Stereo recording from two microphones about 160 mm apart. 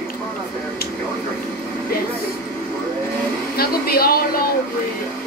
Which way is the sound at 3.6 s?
70° left (ahead or behind).